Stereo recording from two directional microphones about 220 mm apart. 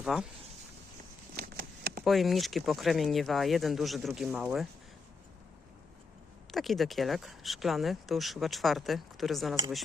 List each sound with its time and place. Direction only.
0.0 s speech: centre (ahead or behind)
1.4 s a sound: 45° right (ahead or behind)
2.0 s speech: centre (ahead or behind)
6.5 s speech: centre (ahead or behind)